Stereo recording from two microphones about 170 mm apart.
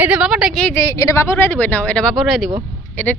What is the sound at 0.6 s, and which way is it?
Speech, 15° left (ahead or behind).